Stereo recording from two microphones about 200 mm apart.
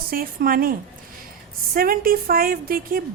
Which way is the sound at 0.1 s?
45° right (ahead or behind).